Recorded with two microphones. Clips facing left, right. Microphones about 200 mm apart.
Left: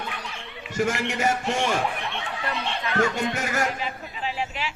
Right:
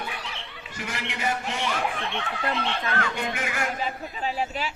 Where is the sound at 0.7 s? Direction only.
45° left (ahead or behind).